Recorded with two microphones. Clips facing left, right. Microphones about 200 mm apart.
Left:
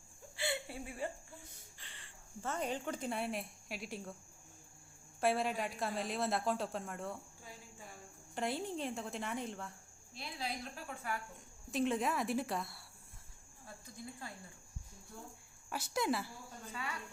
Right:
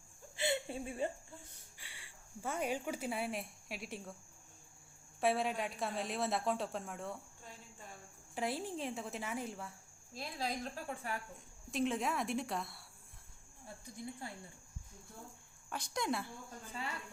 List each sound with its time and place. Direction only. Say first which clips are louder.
0.3 s a sound: right 3 dB; 20° right (ahead or behind)
1.8 s speech: right 1 dB; 10° right (ahead or behind)
5.2 s a woman's voice: even; centre (ahead or behind)
10.2 s a woman's voice: right 3 dB; 45° right (ahead or behind)
11.7 s a woman's voice: left 1 dB; centre (ahead or behind)
13.9 s speech: right 3 dB; 20° right (ahead or behind)
15.7 s a woman's voice: left 2 dB; 5° left (ahead or behind)